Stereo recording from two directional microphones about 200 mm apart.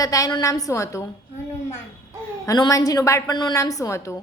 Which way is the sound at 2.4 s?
20° left (ahead or behind).